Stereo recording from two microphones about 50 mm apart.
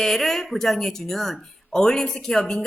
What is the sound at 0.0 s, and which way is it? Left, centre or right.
Speech, centre.